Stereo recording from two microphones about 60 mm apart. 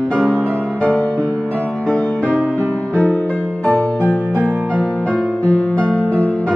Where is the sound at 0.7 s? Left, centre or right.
Centre.